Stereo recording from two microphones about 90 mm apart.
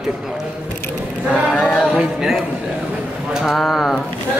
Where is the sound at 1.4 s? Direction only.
5° left (ahead or behind).